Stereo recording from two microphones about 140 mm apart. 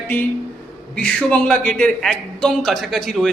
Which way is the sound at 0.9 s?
10° left (ahead or behind).